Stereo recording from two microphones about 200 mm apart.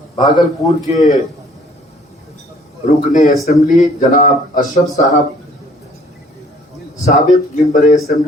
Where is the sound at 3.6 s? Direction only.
40° left (ahead or behind).